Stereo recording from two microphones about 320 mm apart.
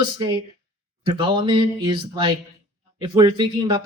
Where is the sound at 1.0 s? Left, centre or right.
Centre.